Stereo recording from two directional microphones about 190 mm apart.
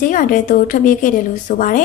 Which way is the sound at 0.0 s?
45° left (ahead or behind).